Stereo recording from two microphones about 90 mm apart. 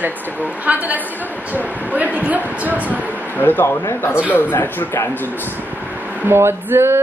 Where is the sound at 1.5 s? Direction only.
15° right (ahead or behind).